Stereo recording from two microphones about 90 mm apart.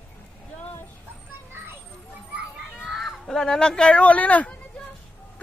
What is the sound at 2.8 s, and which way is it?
A woman's voice, centre (ahead or behind).